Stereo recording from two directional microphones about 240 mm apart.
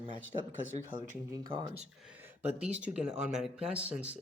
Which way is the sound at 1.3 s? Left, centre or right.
Centre.